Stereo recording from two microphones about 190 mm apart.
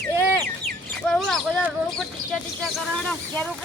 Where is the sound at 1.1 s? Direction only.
5° left (ahead or behind).